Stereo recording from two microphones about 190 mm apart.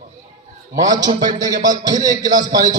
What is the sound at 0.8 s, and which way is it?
A man's voice, 20° right (ahead or behind).